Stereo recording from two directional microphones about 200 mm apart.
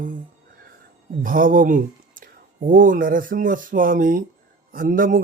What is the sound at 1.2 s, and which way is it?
Speech, 45° right (ahead or behind).